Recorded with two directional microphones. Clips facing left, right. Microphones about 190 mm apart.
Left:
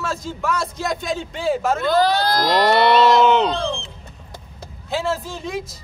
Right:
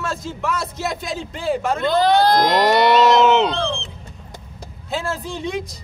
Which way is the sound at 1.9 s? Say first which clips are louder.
Right 4 dB; 20° right (ahead or behind).